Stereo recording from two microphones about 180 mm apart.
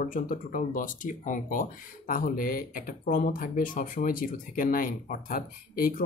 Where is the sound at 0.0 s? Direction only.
50° left (ahead or behind).